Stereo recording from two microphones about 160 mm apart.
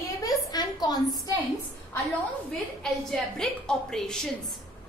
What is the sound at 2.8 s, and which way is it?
A woman's voice, 5° left (ahead or behind).